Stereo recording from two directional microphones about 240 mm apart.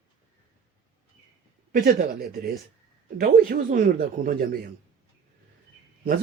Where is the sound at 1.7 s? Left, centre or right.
Right.